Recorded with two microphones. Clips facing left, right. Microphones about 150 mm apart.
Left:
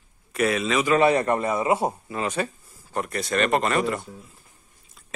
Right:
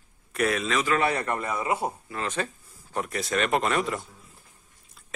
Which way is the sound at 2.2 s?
10° left (ahead or behind).